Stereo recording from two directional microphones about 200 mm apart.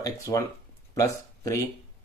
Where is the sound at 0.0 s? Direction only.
15° left (ahead or behind).